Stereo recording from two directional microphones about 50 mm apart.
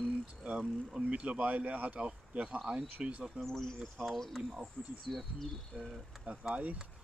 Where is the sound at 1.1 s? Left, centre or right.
Right.